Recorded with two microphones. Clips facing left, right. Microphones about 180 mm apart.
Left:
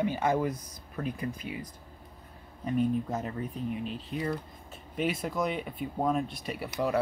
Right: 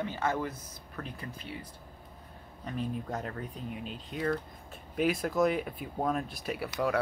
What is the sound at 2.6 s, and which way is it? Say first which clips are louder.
Speech: left 7 dB; 5° left (ahead or behind).